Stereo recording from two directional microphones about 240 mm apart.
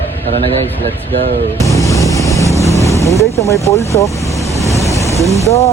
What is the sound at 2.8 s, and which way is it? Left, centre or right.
Boat, centre.